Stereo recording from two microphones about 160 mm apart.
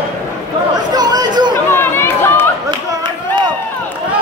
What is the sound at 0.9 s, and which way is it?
Chatter, 25° right (ahead or behind).